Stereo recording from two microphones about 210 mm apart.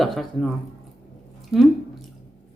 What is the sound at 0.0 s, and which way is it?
Speech, centre (ahead or behind).